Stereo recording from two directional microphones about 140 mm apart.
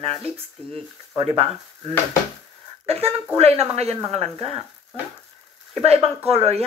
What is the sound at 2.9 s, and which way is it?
A woman's voice, 45° right (ahead or behind).